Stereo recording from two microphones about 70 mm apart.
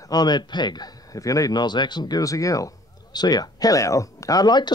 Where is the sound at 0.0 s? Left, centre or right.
Left.